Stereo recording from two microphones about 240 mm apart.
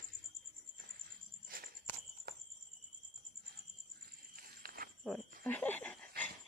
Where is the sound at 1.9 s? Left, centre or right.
Centre.